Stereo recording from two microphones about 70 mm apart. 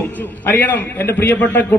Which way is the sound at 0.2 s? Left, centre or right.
Left.